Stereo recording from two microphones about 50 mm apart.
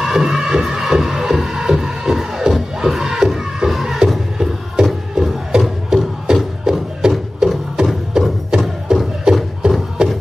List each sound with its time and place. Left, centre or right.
0.0 s music: centre